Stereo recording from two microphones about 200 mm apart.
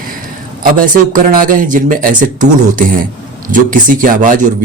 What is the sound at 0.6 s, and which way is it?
Speech, 40° right (ahead or behind).